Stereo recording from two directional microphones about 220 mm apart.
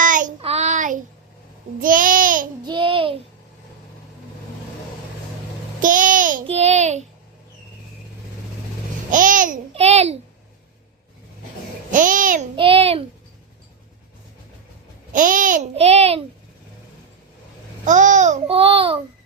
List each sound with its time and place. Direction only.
0.0 s child singing: 35° right (ahead or behind)
1.8 s babbling: 40° right (ahead or behind)
2.6 s child singing: 20° right (ahead or behind)
5.8 s child singing: 35° right (ahead or behind)
9.0 s babbling: 35° right (ahead or behind)
11.9 s a child's voice: 35° right (ahead or behind)
12.5 s babbling: 25° right (ahead or behind)
15.1 s a child's voice: 35° right (ahead or behind)
17.8 s babbling: 35° right (ahead or behind)